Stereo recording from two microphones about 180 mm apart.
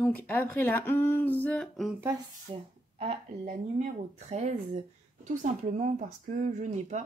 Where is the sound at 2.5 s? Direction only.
30° right (ahead or behind).